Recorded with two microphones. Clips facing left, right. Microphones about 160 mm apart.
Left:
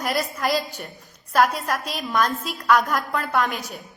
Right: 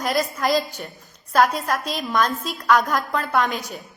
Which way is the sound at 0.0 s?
5° left (ahead or behind).